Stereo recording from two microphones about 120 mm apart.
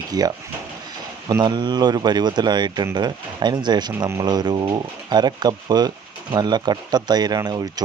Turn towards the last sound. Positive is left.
turn(degrees=-35)  # may be behind; listen again after turning